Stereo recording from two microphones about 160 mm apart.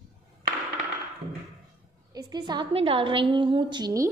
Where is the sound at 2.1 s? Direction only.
25° right (ahead or behind).